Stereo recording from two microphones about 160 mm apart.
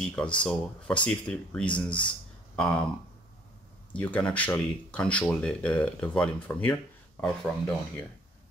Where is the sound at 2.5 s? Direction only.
5° left (ahead or behind).